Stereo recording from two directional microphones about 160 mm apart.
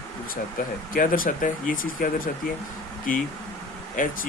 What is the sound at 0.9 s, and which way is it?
Speech, 60° left (ahead or behind).